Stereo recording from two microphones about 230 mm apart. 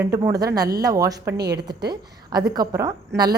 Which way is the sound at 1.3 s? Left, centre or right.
Right.